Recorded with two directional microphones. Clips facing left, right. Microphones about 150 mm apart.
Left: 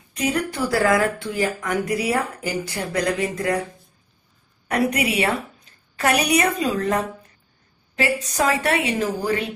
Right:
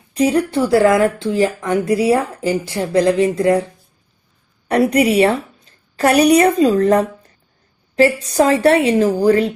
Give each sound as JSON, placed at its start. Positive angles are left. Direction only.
{"t": 0.1, "sound": "speech", "side_deg": -35}
{"t": 4.7, "sound": "a woman's voice", "side_deg": -35}